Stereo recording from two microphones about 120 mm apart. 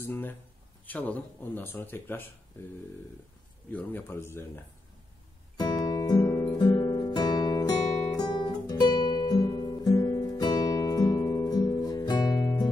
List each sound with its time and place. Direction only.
0.0 s speech: 15° left (ahead or behind)
3.7 s a man's voice: 15° left (ahead or behind)
5.6 s guitar: 35° left (ahead or behind)